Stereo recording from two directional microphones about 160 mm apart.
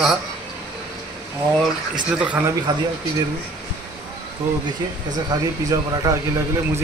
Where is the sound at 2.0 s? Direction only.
5° right (ahead or behind).